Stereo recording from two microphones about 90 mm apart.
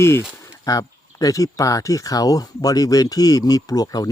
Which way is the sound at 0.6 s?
45° left (ahead or behind).